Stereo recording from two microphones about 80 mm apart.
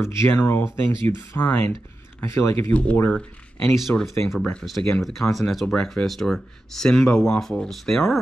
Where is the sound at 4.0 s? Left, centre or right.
Centre.